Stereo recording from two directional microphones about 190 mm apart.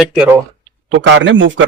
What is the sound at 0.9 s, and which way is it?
Speech, 70° right (ahead or behind).